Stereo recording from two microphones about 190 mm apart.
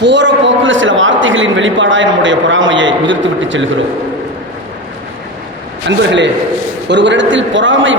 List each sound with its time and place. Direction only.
0.0 s a man's voice: 70° right (ahead or behind)
6.0 s a man's voice: 70° right (ahead or behind)